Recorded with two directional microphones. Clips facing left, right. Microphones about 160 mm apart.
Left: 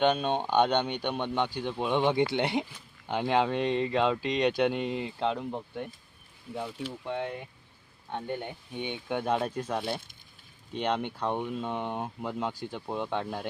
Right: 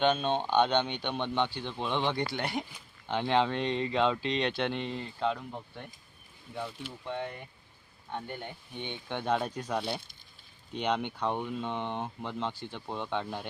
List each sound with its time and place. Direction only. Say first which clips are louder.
0.0 s speech: left 2 dB; 10° left (ahead or behind)
2.3 s speech: left 5 dB; 25° left (ahead or behind)
3.1 s speech: left 1 dB; 5° left (ahead or behind)
7.0 s speech: left 2 dB; 10° left (ahead or behind)